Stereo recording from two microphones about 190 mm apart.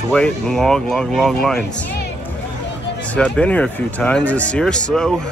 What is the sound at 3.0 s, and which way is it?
Speech, 5° left (ahead or behind).